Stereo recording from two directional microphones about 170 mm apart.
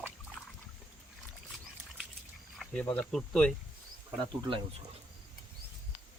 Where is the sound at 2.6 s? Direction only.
5° left (ahead or behind).